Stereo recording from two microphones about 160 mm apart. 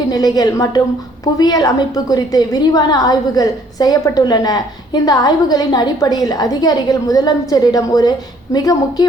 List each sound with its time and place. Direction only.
0.1 s a woman's voice: 25° left (ahead or behind)